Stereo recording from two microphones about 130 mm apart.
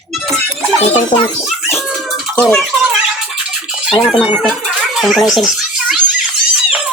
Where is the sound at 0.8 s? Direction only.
55° left (ahead or behind).